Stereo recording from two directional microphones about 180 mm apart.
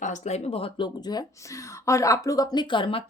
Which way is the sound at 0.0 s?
40° left (ahead or behind).